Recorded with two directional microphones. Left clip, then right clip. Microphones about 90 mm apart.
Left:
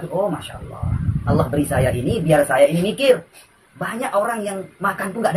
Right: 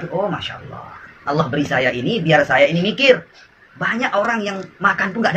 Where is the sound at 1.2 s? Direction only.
55° left (ahead or behind).